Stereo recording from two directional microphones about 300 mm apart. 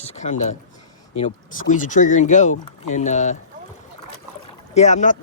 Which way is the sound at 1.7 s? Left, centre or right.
Left.